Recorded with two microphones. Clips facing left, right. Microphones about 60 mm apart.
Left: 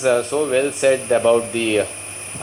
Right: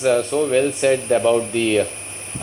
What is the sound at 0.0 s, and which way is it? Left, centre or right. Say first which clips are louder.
Speech: even; centre.